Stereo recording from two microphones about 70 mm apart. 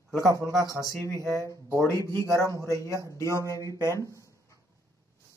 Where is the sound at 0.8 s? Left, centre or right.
Left.